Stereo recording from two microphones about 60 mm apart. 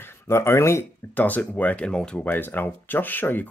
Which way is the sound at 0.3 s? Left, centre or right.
Left.